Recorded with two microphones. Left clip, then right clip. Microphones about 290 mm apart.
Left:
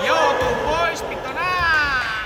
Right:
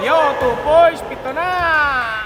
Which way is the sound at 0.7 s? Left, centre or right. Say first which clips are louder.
Right 9 dB; right.